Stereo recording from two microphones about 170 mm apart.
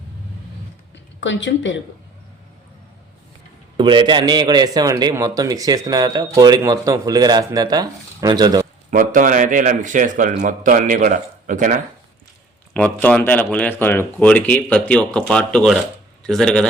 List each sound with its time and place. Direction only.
1.2 s a woman's voice: 90° left
3.8 s a man's voice: 30° right (ahead or behind)
8.9 s speech: 55° right (ahead or behind)
12.7 s speech: 10° left (ahead or behind)